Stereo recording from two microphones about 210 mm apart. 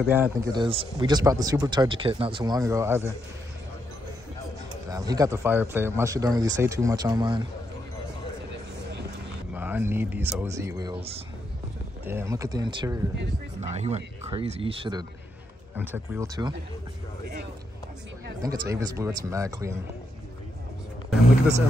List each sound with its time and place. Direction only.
0.0 s speech: 10° right (ahead or behind)
4.8 s speech: 15° right (ahead or behind)
9.5 s speech: 10° right (ahead or behind); by 11.1 s 25° right (ahead or behind)
12.0 s speech: 10° right (ahead or behind)
13.7 s speech: 30° right (ahead or behind)
15.7 s speech: 10° right (ahead or behind)
18.4 s speech: 15° right (ahead or behind)